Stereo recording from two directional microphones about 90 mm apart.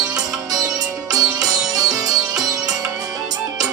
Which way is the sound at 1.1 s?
45° right (ahead or behind).